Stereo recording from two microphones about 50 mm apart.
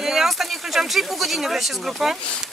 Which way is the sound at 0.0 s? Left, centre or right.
Centre.